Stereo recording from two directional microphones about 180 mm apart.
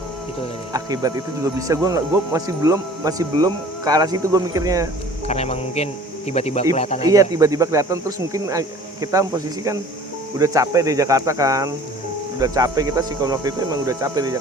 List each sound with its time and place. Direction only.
0.7 s speech: 20° right (ahead or behind)
5.3 s speech: 35° left (ahead or behind)
7.0 s speech: 20° right (ahead or behind)